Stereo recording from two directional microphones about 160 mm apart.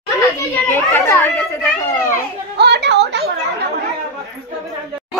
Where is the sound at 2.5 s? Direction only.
90° right.